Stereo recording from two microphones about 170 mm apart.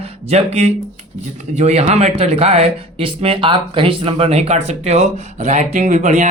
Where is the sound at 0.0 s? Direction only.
40° right (ahead or behind).